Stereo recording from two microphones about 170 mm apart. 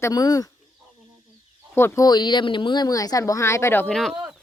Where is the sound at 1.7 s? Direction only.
15° left (ahead or behind).